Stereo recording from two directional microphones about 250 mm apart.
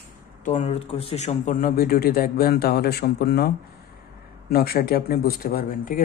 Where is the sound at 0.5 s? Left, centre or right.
Left.